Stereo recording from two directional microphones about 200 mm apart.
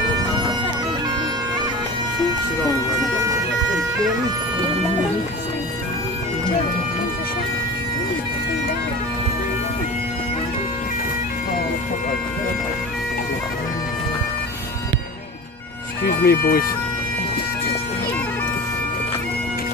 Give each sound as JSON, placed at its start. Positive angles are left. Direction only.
{"t": 16.0, "sound": "speech", "side_deg": 50}